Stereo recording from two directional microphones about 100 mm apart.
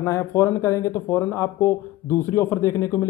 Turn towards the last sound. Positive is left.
turn(degrees=30)  # may be behind; listen again after turning